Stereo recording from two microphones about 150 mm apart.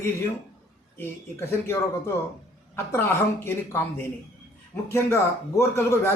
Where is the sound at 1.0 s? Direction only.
15° left (ahead or behind).